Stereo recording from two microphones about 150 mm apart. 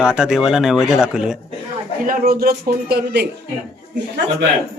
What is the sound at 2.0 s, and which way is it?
Speech, 75° right (ahead or behind).